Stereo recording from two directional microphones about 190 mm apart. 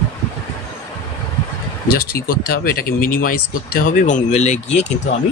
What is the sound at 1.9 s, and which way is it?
Speech, 50° left (ahead or behind).